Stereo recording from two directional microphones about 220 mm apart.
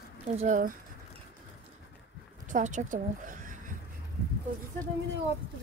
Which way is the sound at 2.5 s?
35° right (ahead or behind).